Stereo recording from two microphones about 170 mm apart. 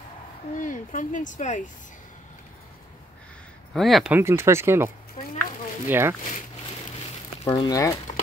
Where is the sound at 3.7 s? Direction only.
Centre (ahead or behind).